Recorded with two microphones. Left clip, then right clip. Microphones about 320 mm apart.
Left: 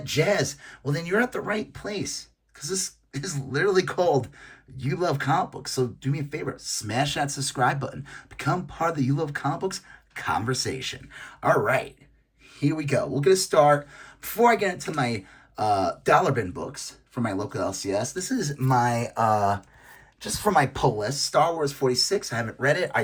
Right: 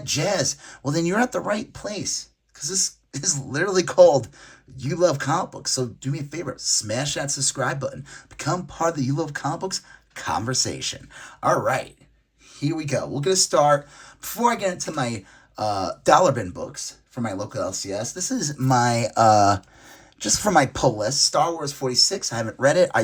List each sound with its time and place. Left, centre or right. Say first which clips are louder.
0.0 s speech: even; centre
20.3 s speech: right 3 dB; centre